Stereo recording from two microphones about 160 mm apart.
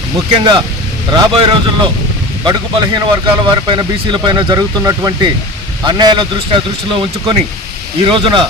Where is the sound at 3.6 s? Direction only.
30° right (ahead or behind).